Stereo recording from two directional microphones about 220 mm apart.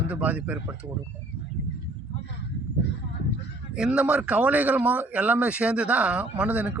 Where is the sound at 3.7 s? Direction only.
5° right (ahead or behind).